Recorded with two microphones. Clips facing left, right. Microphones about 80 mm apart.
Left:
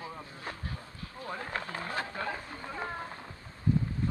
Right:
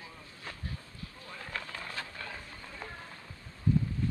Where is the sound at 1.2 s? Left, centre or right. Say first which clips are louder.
Left 10 dB; left.